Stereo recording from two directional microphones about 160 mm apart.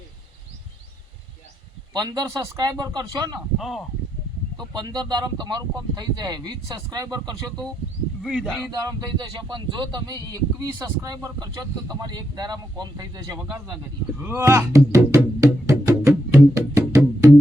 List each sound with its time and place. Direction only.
1.9 s speech: 25° right (ahead or behind)
3.6 s speech: centre (ahead or behind)
4.7 s speech: 25° right (ahead or behind)
8.2 s speech: centre (ahead or behind)
8.7 s speech: 25° right (ahead or behind)
15.6 s music: 20° right (ahead or behind)